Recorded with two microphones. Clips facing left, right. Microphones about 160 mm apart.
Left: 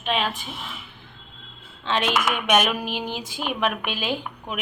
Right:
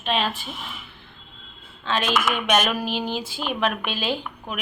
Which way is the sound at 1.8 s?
20° left (ahead or behind).